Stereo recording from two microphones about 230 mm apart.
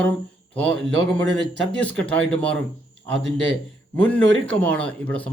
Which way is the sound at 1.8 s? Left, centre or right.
Centre.